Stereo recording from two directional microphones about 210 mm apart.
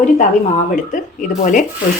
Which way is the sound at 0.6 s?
40° left (ahead or behind).